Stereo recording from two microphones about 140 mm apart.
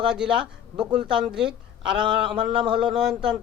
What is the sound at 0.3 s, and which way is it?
Speech, 35° right (ahead or behind).